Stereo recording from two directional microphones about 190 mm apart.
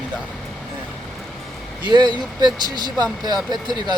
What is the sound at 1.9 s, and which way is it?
Speech, 25° right (ahead or behind).